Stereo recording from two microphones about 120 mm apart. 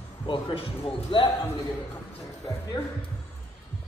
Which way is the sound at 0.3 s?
45° left (ahead or behind).